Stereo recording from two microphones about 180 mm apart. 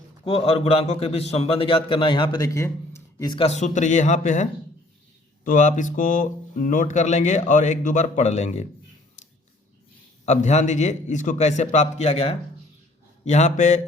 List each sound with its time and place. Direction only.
0.3 s a man's voice: 30° left (ahead or behind)
5.5 s speech: 45° left (ahead or behind)
10.2 s a man's voice: 40° left (ahead or behind)